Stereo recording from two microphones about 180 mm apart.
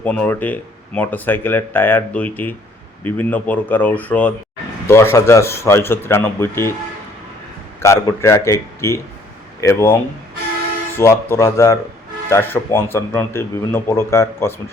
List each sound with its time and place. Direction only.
0.0 s speech: 10° left (ahead or behind)
7.8 s speech: 15° left (ahead or behind)